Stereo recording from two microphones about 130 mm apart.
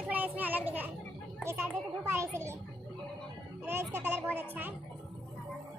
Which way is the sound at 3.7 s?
15° right (ahead or behind).